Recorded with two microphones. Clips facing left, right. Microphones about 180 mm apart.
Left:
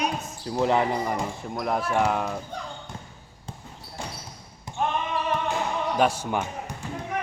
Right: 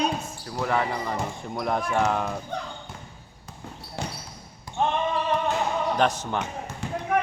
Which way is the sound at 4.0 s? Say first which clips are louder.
Right 3 dB; 70° right (ahead or behind).